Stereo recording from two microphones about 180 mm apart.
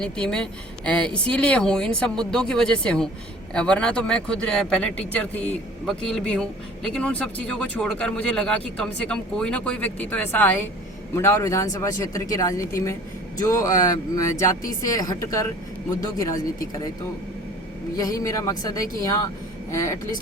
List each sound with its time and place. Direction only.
0.0 s a woman's voice: 5° left (ahead or behind)
17.9 s a woman's voice: 20° left (ahead or behind)